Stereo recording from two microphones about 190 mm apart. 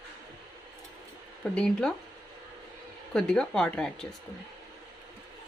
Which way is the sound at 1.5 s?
5° left (ahead or behind).